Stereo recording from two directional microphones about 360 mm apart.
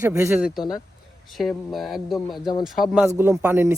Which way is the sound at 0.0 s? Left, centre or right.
Centre.